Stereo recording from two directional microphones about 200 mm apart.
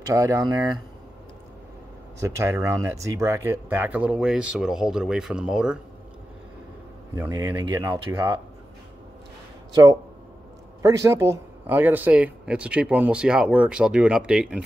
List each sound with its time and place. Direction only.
0.0 s speech: 15° right (ahead or behind)
2.1 s speech: 15° right (ahead or behind)
7.2 s speech: 15° right (ahead or behind)
9.7 s speech: 20° right (ahead or behind)